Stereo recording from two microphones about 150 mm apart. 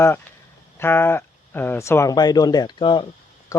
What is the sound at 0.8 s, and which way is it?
Speech, 15° left (ahead or behind).